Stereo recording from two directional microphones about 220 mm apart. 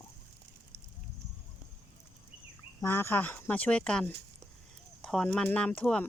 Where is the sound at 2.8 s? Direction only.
10° left (ahead or behind).